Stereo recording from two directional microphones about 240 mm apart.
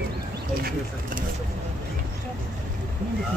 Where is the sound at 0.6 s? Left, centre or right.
Right.